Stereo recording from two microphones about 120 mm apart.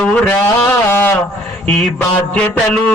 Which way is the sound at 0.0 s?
20° left (ahead or behind).